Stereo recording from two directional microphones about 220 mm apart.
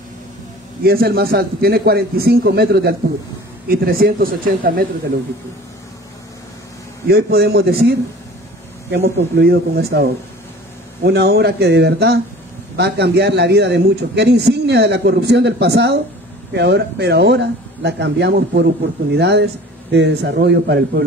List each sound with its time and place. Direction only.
0.8 s a man's voice: 45° right (ahead or behind)
7.1 s a man's voice: 45° right (ahead or behind)
8.9 s a man's voice: 50° right (ahead or behind)
11.1 s a man's voice: 45° right (ahead or behind)